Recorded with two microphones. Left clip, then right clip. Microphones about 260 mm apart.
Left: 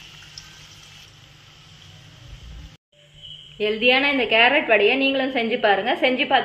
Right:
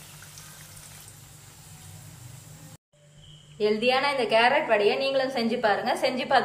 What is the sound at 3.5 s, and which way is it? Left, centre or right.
A woman's voice, left.